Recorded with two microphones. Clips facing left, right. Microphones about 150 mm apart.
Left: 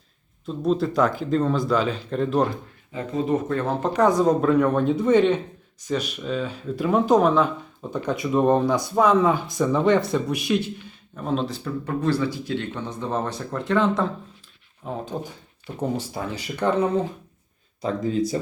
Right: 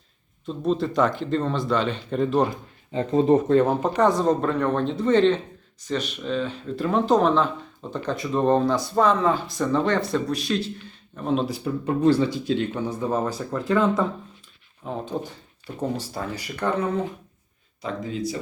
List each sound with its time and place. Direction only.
0.4 s speech: centre (ahead or behind)
2.9 s speech: 30° right (ahead or behind)
3.8 s speech: 5° right (ahead or behind)
4.0 s speech: 10° left (ahead or behind)
11.2 s speech: centre (ahead or behind)
11.6 s speech: 15° right (ahead or behind); by 15.0 s centre (ahead or behind)
16.0 s speech: 25° left (ahead or behind)
17.8 s speech: 45° left (ahead or behind)